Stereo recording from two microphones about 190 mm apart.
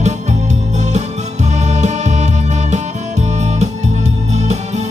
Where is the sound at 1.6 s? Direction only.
40° right (ahead or behind).